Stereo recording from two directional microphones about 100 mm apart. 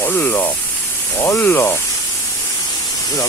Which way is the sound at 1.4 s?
20° left (ahead or behind).